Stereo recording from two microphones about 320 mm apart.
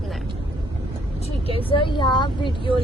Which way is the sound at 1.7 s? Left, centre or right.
Centre.